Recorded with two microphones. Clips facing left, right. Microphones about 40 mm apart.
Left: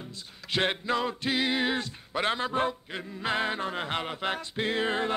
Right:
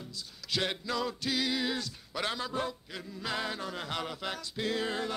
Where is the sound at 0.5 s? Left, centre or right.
Left.